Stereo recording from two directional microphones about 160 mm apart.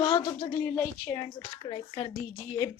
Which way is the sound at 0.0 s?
30° left (ahead or behind).